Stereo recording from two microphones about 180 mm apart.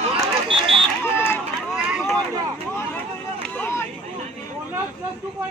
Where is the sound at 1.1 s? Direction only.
10° left (ahead or behind).